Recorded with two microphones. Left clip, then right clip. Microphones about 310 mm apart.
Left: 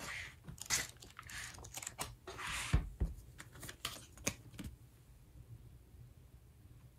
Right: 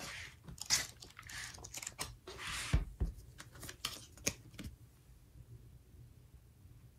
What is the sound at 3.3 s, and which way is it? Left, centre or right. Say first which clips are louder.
Computer keyboard: right 1 dB; centre.